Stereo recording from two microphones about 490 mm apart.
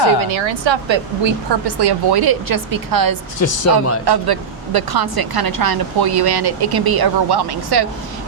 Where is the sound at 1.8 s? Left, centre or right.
Right.